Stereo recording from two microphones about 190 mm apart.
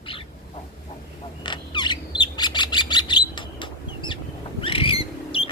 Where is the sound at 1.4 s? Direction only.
25° left (ahead or behind).